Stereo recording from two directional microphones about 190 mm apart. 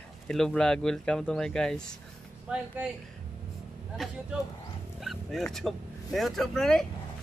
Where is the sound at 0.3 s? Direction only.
5° left (ahead or behind).